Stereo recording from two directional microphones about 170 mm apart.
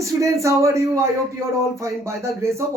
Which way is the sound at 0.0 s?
20° right (ahead or behind).